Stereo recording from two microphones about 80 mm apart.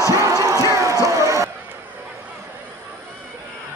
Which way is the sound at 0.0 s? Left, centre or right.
Right.